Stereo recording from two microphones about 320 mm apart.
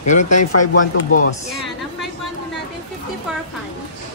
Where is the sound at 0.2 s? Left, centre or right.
Left.